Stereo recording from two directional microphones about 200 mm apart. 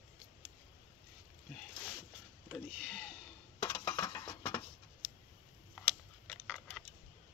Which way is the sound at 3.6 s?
15° left (ahead or behind).